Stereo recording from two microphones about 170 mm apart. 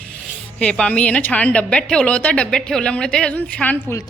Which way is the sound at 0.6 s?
5° left (ahead or behind).